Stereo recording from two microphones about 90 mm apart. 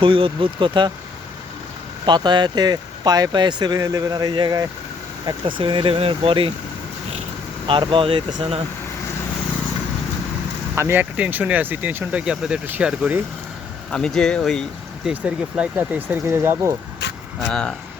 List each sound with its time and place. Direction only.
0.0 s speech: 75° right (ahead or behind)
2.0 s speech: 55° right (ahead or behind)
5.5 s speech: 65° right (ahead or behind); by 6.5 s 85° right
7.7 s speech: 70° right (ahead or behind)
10.8 s speech: 30° right (ahead or behind)
11.2 s speech: 15° right (ahead or behind)
13.9 s speech: 5° left (ahead or behind)
15.1 s speech: 15° right (ahead or behind)
17.5 s speech: 10° left (ahead or behind)